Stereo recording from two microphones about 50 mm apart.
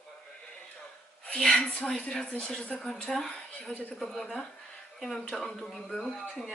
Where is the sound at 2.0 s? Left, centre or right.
Left.